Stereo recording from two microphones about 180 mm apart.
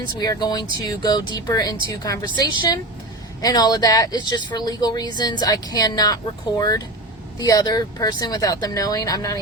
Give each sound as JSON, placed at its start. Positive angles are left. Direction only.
{"t": 0.2, "sound": "speech", "side_deg": 20}